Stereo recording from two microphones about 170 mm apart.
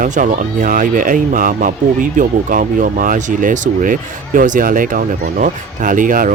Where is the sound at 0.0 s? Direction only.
50° right (ahead or behind).